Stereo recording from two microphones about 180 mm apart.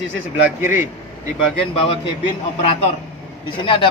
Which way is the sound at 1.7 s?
30° left (ahead or behind).